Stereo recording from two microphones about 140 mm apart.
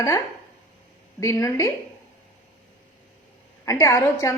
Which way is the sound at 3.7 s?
20° left (ahead or behind).